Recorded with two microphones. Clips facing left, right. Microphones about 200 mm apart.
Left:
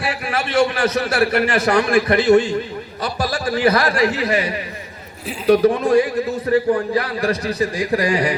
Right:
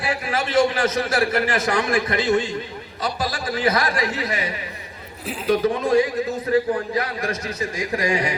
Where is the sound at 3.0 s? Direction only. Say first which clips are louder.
Left 3 dB; 65° left (ahead or behind).